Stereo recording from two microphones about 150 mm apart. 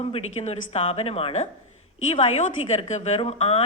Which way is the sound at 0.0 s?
45° left (ahead or behind).